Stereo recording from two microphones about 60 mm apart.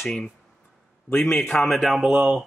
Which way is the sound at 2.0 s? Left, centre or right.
Centre.